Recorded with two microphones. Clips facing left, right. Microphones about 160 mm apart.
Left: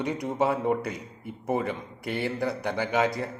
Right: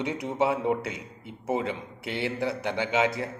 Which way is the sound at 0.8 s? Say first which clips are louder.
Left 2 dB; 75° right (ahead or behind).